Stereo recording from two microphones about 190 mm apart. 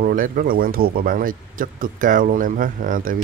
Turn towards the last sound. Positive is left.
turn(degrees=-45)  # may be behind; listen again after turning